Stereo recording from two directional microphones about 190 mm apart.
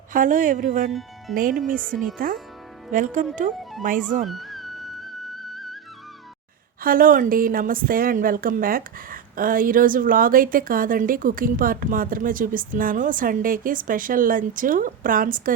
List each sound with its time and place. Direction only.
0.1 s a woman's voice: 45° right (ahead or behind)
1.8 s speech: centre (ahead or behind)
2.1 s a woman's voice: 50° right (ahead or behind)
3.6 s music: centre (ahead or behind)
6.8 s a woman's voice: 45° right (ahead or behind)